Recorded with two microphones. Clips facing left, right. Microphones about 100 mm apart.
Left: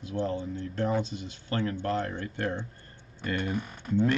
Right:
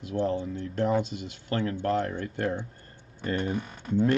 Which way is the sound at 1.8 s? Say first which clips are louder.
Right 3 dB; 40° right (ahead or behind).